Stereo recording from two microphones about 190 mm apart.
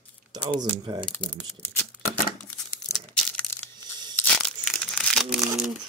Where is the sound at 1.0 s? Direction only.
5° left (ahead or behind).